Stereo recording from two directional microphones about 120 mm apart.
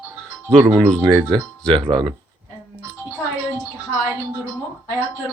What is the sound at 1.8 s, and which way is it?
Speech, 40° right (ahead or behind).